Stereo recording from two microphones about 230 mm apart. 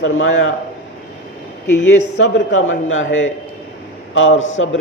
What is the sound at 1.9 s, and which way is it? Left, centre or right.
A man's voice, left.